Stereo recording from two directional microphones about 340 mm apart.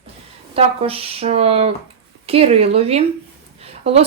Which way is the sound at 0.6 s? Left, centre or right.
Centre.